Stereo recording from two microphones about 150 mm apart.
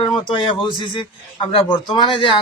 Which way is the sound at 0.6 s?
35° left (ahead or behind).